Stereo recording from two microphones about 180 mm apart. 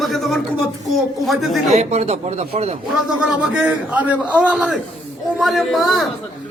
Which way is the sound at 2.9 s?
5° right (ahead or behind).